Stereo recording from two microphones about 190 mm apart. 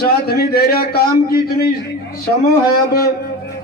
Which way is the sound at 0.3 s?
55° left (ahead or behind).